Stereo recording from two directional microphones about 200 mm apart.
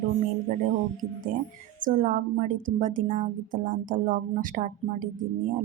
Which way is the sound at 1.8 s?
40° right (ahead or behind).